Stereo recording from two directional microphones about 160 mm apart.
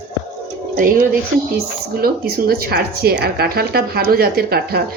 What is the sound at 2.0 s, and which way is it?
Speech, 70° right (ahead or behind).